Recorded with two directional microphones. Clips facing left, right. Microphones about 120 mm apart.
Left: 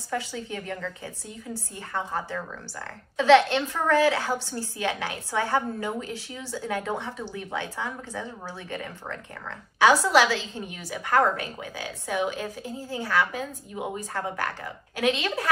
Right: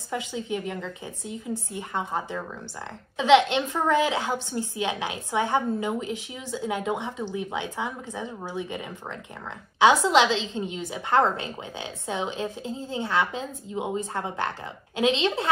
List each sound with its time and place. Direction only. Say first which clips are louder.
0.1 s a woman's voice: right 2 dB; 20° right (ahead or behind)